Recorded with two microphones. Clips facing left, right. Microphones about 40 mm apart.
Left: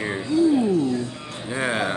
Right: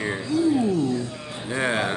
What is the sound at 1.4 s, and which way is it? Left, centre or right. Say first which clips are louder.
Speech: even; centre.